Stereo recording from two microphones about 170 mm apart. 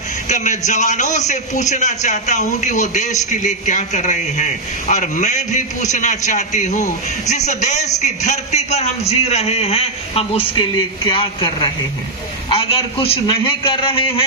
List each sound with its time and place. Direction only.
0.3 s a man's voice: 45° left (ahead or behind)